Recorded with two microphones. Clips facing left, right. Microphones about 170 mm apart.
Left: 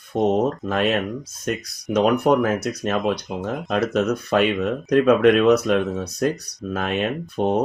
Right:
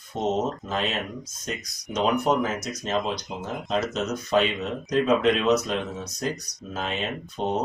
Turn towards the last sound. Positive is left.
turn(degrees=55)  # may be behind; listen again after turning